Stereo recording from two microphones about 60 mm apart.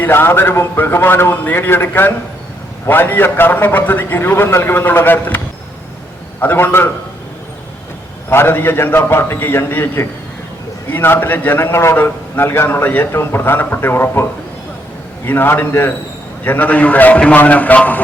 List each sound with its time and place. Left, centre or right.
0.0 s a man's voice: left
6.4 s a man's voice: left
8.3 s a man's voice: left
15.3 s a man's voice: left